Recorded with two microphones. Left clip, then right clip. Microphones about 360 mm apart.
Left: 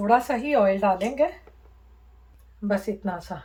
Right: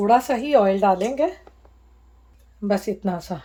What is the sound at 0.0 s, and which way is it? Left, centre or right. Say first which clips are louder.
Speech: right 3 dB; right.